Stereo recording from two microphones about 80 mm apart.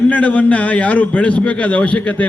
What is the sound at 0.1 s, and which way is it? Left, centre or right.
A man's voice, centre.